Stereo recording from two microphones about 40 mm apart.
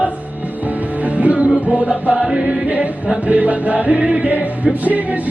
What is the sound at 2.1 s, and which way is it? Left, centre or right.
Chant, centre.